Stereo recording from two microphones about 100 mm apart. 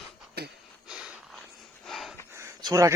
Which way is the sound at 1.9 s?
Centre (ahead or behind).